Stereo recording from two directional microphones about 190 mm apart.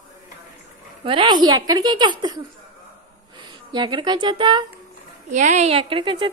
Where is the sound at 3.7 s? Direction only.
25° right (ahead or behind).